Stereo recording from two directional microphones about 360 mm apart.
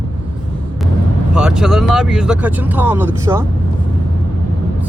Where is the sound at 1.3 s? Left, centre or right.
Centre.